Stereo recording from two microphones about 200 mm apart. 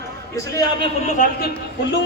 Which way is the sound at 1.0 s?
40° left (ahead or behind).